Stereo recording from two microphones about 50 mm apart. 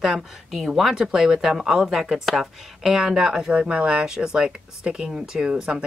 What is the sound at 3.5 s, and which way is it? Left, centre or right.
Speech, right.